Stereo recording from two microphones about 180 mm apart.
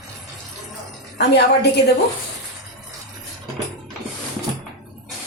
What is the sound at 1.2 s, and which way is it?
Speech, 70° left (ahead or behind).